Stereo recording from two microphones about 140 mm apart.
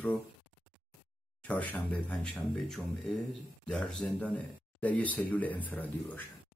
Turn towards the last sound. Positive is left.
turn(degrees=10)  # may be behind; listen again after turning